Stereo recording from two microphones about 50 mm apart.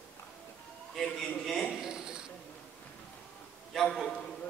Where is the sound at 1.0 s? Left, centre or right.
Centre.